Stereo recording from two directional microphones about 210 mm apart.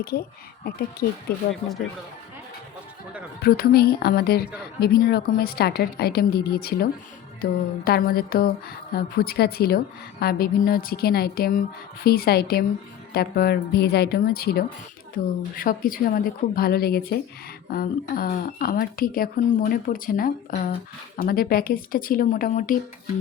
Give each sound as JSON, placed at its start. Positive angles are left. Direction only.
{"t": 0.0, "sound": "a woman's voice", "side_deg": 45}
{"t": 3.4, "sound": "a woman's voice", "side_deg": 45}
{"t": 7.9, "sound": "a woman's voice", "side_deg": 45}